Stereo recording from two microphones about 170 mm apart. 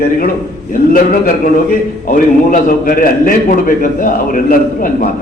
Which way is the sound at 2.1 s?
55° left (ahead or behind).